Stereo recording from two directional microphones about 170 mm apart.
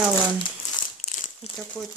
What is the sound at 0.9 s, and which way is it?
Crumpling, 45° left (ahead or behind).